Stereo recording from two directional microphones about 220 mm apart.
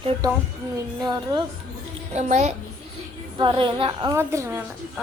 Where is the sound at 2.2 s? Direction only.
30° right (ahead or behind).